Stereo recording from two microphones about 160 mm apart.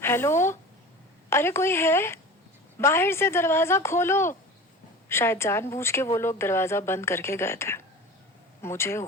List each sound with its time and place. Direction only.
0.0 s a woman's voice: 15° left (ahead or behind)